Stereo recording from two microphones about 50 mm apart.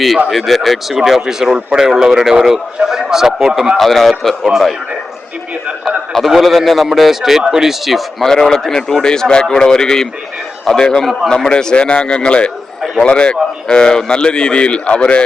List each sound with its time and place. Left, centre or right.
0.3 s a man's voice: centre
3.8 s speech: centre
6.1 s speech: centre
8.3 s a man's voice: centre